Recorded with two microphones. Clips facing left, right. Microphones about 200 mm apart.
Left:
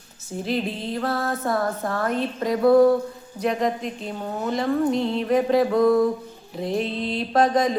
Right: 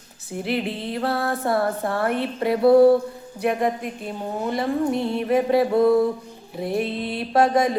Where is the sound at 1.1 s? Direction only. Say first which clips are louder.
Right 1 dB; 15° right (ahead or behind).